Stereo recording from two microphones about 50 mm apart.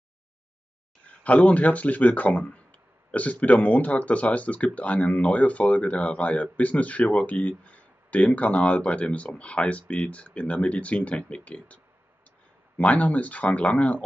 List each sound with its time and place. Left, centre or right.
1.2 s speech: left